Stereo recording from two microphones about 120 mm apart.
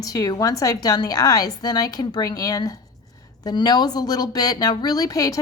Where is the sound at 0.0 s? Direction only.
30° left (ahead or behind).